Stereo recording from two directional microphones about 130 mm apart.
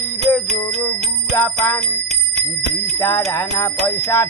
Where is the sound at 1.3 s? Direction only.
15° left (ahead or behind).